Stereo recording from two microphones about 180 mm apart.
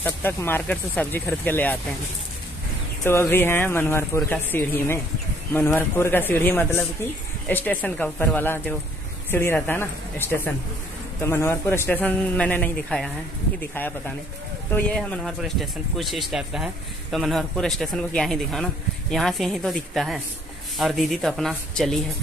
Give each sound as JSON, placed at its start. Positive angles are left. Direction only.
{"t": 0.0, "sound": "speech", "side_deg": 10}
{"t": 3.0, "sound": "speech", "side_deg": 15}